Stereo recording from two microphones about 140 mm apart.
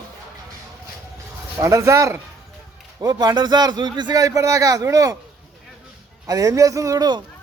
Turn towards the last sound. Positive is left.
turn(degrees=-25)  # may be behind; listen again after turning